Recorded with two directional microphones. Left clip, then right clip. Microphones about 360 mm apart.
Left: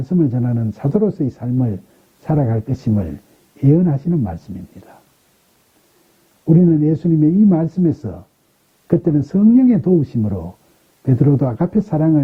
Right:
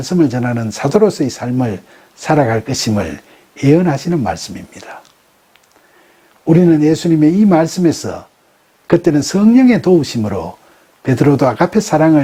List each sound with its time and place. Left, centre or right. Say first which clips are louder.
0.0 s speech: right 5 dB; centre
6.9 s speech: right 4 dB; centre